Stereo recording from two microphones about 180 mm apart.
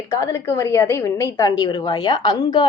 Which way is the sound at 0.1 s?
15° left (ahead or behind).